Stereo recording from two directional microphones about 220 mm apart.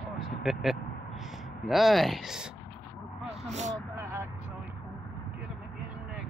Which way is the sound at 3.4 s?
30° right (ahead or behind).